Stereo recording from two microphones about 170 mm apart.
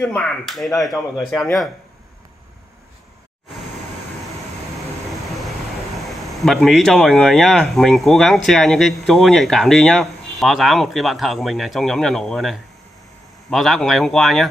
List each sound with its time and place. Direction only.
0.0 s speech: 5° left (ahead or behind)
6.0 s speech: centre (ahead or behind)